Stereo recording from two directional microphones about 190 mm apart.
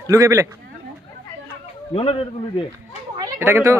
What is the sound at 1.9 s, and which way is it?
Speech, 30° left (ahead or behind).